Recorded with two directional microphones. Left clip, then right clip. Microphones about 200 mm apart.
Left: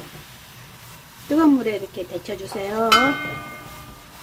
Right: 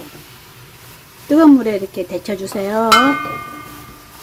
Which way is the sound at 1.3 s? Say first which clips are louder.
Right 7 dB; 15° right (ahead or behind).